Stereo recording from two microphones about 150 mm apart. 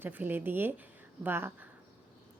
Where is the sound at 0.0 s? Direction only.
15° right (ahead or behind).